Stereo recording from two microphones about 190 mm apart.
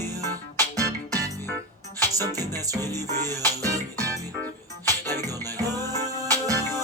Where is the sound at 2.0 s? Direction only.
20° right (ahead or behind).